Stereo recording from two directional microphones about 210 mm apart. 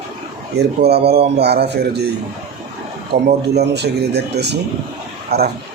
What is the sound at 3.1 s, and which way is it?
A man's voice, 50° right (ahead or behind).